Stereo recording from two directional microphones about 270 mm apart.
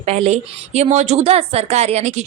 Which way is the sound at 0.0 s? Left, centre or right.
Right.